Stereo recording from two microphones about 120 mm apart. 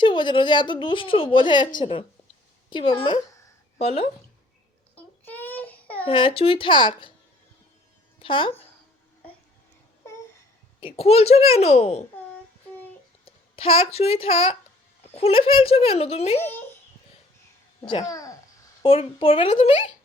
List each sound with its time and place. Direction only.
0.0 s a woman's voice: 40° left (ahead or behind)
4.9 s baby cry: 15° left (ahead or behind)
6.1 s a woman's voice: 45° left (ahead or behind)
8.2 s a woman's voice: 45° left (ahead or behind)
10.8 s speech: 50° left (ahead or behind)
13.2 s speech: 50° left (ahead or behind)
18.0 s a child's voice: 30° left (ahead or behind)
18.8 s a woman's voice: 50° left (ahead or behind)